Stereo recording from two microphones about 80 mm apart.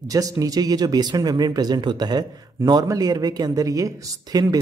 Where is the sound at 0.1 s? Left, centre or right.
Right.